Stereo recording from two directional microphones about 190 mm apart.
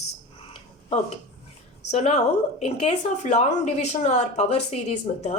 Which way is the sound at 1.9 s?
35° left (ahead or behind).